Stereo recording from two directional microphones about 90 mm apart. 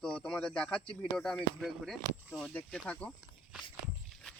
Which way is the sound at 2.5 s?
15° left (ahead or behind).